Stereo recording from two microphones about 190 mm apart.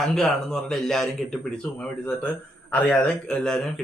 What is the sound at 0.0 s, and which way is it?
Speech, centre (ahead or behind).